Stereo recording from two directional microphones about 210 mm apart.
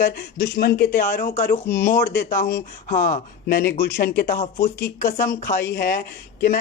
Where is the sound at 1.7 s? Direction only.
10° left (ahead or behind).